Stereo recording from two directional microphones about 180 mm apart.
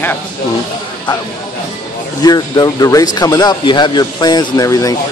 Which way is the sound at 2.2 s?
20° left (ahead or behind).